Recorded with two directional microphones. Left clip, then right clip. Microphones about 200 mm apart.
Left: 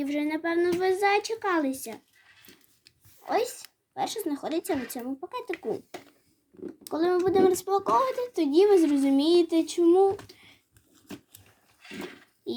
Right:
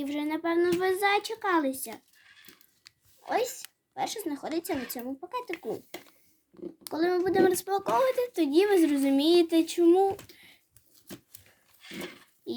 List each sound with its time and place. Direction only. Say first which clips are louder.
0.0 s speech: left 2 dB; centre (ahead or behind)
3.2 s speech: left 2 dB; 5° left (ahead or behind)
6.9 s a child's voice: left 2 dB; centre (ahead or behind)
10.3 s a sound: even; centre (ahead or behind)
11.8 s a sound: even; 55° right (ahead or behind)
12.5 s speech: left 2 dB; 5° left (ahead or behind)